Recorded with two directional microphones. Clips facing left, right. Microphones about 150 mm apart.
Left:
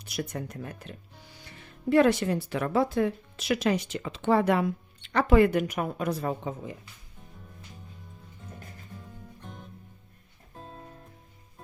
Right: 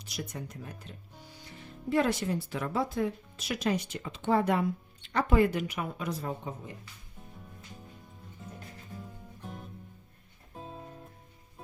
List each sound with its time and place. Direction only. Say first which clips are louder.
0.0 s speech: left 5 dB; 55° left (ahead or behind)
9.0 s music: right 1 dB; 5° right (ahead or behind)